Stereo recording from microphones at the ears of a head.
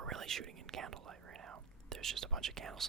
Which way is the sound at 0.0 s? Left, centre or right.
Right.